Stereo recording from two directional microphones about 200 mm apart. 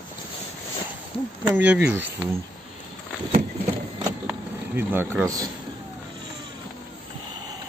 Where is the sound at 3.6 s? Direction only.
25° right (ahead or behind).